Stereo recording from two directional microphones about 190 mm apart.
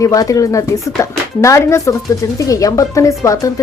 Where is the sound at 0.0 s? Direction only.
15° left (ahead or behind).